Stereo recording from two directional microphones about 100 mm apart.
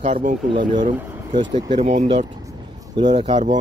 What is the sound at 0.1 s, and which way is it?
Speech, 55° right (ahead or behind).